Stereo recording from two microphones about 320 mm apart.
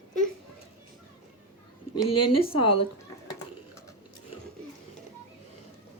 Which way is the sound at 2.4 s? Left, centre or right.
Centre.